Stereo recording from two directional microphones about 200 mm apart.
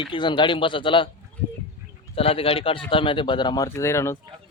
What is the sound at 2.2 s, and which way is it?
Speech, 30° left (ahead or behind).